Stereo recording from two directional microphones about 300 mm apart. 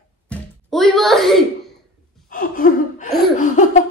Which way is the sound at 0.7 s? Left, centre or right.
Centre.